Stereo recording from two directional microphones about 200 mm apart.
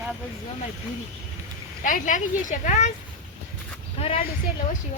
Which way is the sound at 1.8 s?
40° left (ahead or behind).